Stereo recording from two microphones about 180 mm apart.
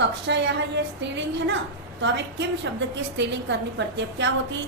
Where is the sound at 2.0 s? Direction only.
80° right.